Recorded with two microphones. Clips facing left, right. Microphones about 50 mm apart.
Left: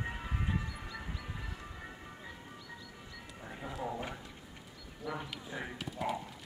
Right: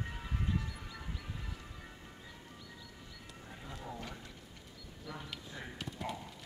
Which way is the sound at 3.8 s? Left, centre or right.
Left.